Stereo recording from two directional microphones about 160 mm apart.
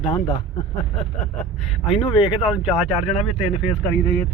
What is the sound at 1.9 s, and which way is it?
Speech, 30° left (ahead or behind).